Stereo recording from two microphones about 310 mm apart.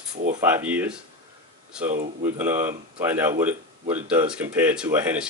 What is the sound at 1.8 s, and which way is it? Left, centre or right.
Speech, right.